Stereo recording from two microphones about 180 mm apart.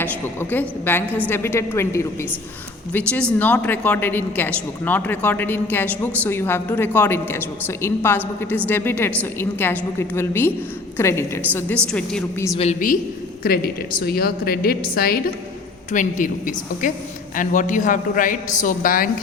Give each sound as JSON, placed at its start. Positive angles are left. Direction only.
{"t": 0.0, "sound": "a woman's voice", "side_deg": 10}
{"t": 12.5, "sound": "a man's voice", "side_deg": 45}
{"t": 13.4, "sound": "a woman's voice", "side_deg": 55}
{"t": 15.9, "sound": "a man's voice", "side_deg": 45}